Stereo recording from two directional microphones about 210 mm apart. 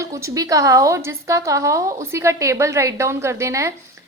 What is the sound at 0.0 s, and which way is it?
A woman's voice, 15° right (ahead or behind).